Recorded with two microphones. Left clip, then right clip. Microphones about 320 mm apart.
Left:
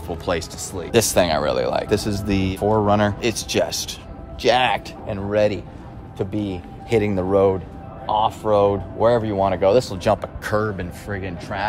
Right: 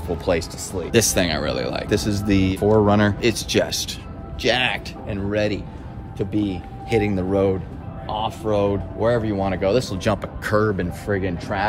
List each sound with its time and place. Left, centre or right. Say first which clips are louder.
0.2 s speech: right 1 dB; centre
4.4 s speech: left 3 dB; centre